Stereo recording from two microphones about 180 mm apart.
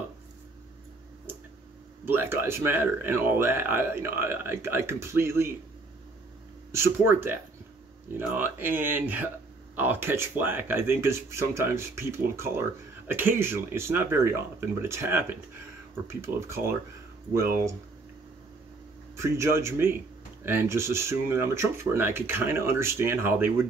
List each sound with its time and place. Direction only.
2.0 s speech: 10° right (ahead or behind)
6.7 s speech: 15° right (ahead or behind)
8.4 s speech: 10° right (ahead or behind)
19.1 s speech: 15° right (ahead or behind)